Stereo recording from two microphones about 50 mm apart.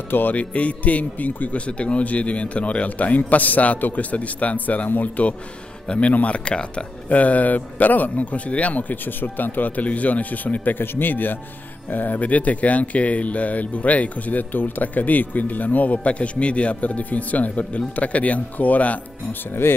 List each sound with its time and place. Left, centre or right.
0.1 s speech: left
19.6 s speech: left